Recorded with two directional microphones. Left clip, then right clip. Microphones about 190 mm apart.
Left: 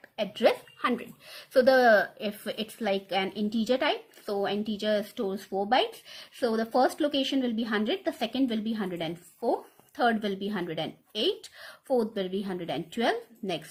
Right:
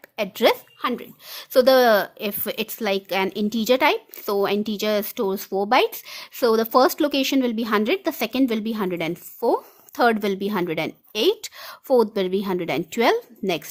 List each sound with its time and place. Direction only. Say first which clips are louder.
0.2 s a woman's voice: right 6 dB; 45° right (ahead or behind)
0.8 s speech: right 3 dB; 30° right (ahead or behind)
1.4 s a woman's voice: right 6 dB; 45° right (ahead or behind)